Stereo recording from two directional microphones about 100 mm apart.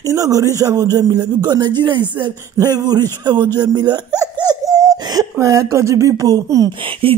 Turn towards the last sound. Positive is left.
turn(degrees=-65)  # may be behind; listen again after turning